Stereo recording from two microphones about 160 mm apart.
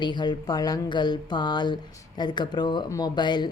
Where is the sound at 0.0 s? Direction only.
30° left (ahead or behind).